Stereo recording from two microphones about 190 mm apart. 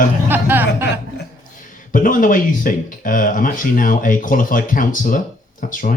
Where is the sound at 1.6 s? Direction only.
45° left (ahead or behind).